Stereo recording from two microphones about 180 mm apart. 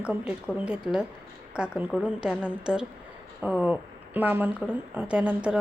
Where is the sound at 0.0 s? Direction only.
5° right (ahead or behind).